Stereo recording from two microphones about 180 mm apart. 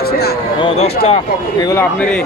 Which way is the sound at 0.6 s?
35° left (ahead or behind).